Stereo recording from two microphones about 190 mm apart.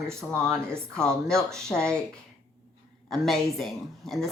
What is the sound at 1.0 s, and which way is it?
Speech, 5° left (ahead or behind).